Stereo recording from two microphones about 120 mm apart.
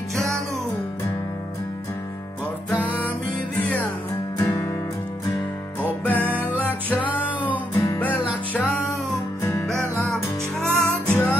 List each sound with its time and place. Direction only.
0.1 s music: centre (ahead or behind)
2.7 s music: 15° left (ahead or behind)
4.4 s music: 20° left (ahead or behind)
6.0 s music: 15° left (ahead or behind)
6.4 s music: 15° right (ahead or behind)
7.2 s music: 15° left (ahead or behind)
9.4 s music: 25° left (ahead or behind)
10.1 s music: 5° left (ahead or behind)